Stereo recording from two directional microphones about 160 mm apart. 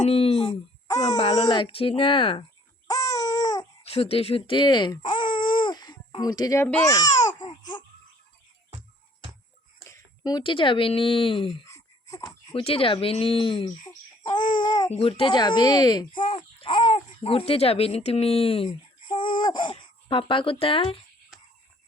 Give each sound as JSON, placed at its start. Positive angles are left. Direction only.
{"t": 0.0, "sound": "a sound", "side_deg": 40}
{"t": 1.0, "sound": "speech", "side_deg": 45}
{"t": 1.5, "sound": "speech", "side_deg": 30}
{"t": 2.8, "sound": "babbling", "side_deg": 20}
{"t": 3.8, "sound": "baby cry", "side_deg": 40}
{"t": 6.8, "sound": "speech", "side_deg": 20}
{"t": 7.3, "sound": "baby cry", "side_deg": 25}
{"t": 9.9, "sound": "speech", "side_deg": 25}
{"t": 11.6, "sound": "a sound", "side_deg": 20}
{"t": 12.5, "sound": "speech", "side_deg": 35}